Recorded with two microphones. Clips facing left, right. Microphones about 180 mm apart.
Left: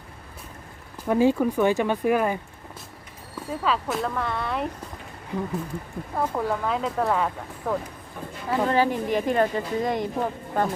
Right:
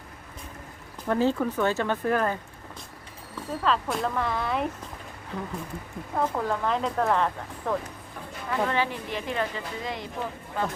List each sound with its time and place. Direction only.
1.0 s speech: 10° left (ahead or behind)
3.6 s speech: 5° left (ahead or behind)
5.3 s speech: 10° left (ahead or behind)
8.6 s a woman's voice: 40° left (ahead or behind)